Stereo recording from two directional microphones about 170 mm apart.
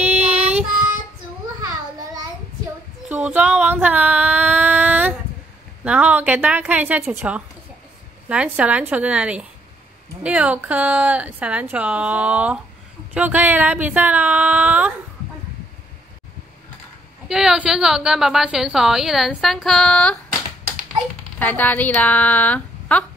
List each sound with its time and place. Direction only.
0.4 s child singing: 40° right (ahead or behind)
3.1 s female singing: 10° right (ahead or behind)
5.9 s speech: 10° right (ahead or behind)
17.3 s a woman's voice: 5° right (ahead or behind)
21.4 s speech: 10° left (ahead or behind)